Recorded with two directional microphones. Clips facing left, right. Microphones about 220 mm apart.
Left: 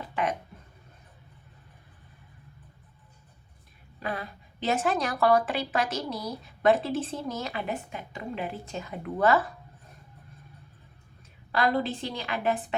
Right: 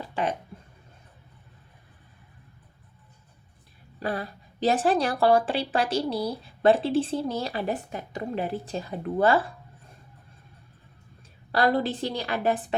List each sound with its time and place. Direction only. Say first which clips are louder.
0.0 s a sound: right 1 dB; 30° right (ahead or behind)
4.0 s a woman's voice: right 4 dB; 35° right (ahead or behind)
11.5 s a woman's voice: right 3 dB; 35° right (ahead or behind)